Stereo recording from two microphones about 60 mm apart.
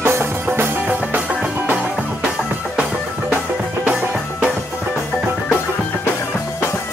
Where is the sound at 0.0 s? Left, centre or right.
Right.